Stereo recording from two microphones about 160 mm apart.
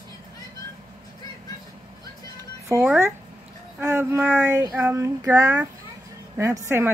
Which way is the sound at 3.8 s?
15° right (ahead or behind).